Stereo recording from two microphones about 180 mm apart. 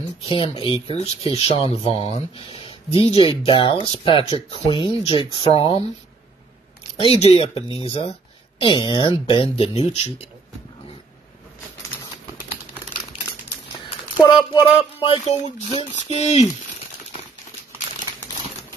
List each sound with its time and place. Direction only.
0.2 s speech: 30° left (ahead or behind)
7.0 s speech: 35° left (ahead or behind)
13.8 s speech: 25° left (ahead or behind)